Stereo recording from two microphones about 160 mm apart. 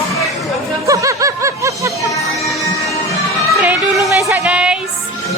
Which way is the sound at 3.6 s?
10° right (ahead or behind).